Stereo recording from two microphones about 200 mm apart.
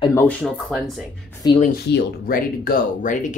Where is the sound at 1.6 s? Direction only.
50° left (ahead or behind).